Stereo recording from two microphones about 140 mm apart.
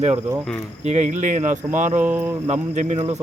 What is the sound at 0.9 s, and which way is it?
Speech, 60° right (ahead or behind).